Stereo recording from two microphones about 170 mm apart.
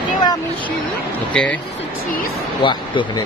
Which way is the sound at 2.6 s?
30° left (ahead or behind).